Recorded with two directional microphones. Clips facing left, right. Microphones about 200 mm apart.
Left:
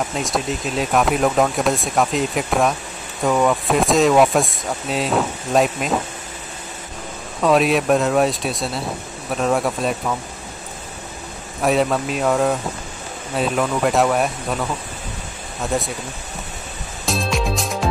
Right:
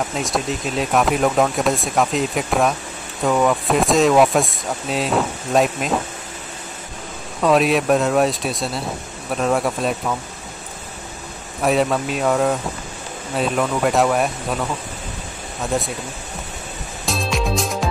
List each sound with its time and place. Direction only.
0.1 s speech: centre (ahead or behind)
7.4 s speech: centre (ahead or behind)
11.6 s speech: centre (ahead or behind)
17.0 s music: centre (ahead or behind)